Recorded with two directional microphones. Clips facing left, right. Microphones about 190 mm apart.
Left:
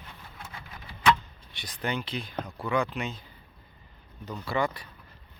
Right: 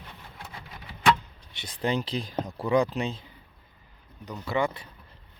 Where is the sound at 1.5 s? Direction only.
25° right (ahead or behind).